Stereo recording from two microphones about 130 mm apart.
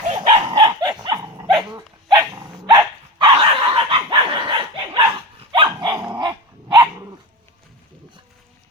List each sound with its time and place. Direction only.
0.1 s dog: 40° right (ahead or behind)
5.9 s dog: 30° right (ahead or behind)